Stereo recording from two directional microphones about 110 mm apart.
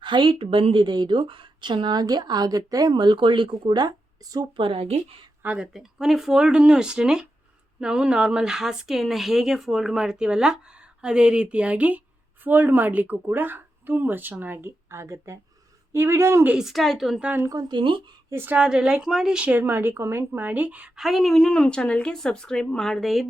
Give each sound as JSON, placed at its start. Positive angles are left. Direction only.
{"t": 0.0, "sound": "a woman's voice", "side_deg": -50}
{"t": 2.9, "sound": "a woman's voice", "side_deg": -45}
{"t": 5.4, "sound": "speech", "side_deg": -15}
{"t": 5.7, "sound": "a woman's voice", "side_deg": -5}
{"t": 16.5, "sound": "a woman's voice", "side_deg": -5}
{"t": 17.2, "sound": "speech", "side_deg": -15}
{"t": 17.5, "sound": "a woman's voice", "side_deg": -40}
{"t": 18.3, "sound": "a woman's voice", "side_deg": -20}